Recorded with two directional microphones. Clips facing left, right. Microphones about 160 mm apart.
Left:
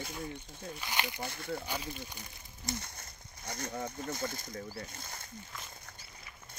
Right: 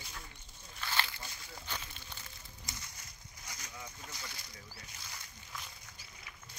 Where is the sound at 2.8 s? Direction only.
60° left (ahead or behind).